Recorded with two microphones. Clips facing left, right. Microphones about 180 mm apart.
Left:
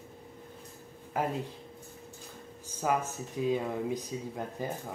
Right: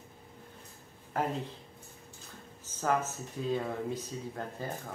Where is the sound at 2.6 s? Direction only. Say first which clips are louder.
Even; 15° left (ahead or behind).